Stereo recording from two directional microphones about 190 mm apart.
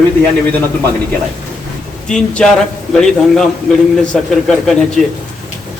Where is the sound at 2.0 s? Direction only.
5° left (ahead or behind).